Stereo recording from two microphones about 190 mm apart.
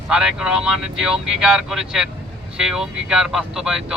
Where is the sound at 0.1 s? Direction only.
5° right (ahead or behind).